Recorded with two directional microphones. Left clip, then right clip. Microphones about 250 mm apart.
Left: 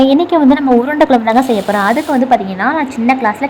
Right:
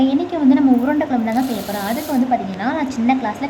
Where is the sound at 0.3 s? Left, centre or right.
Centre.